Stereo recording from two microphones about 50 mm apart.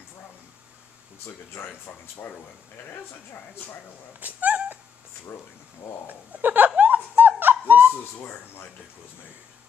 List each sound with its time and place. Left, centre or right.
1.2 s speech: left
1.9 s speech: left
4.2 s cat: right
6.0 s snicker: right
8.2 s speech: left